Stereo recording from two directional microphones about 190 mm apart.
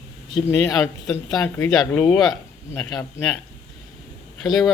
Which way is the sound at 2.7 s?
20° left (ahead or behind).